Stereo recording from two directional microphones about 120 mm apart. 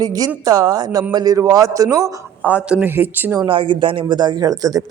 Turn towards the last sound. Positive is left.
turn(degrees=-30)  # may be behind; listen again after turning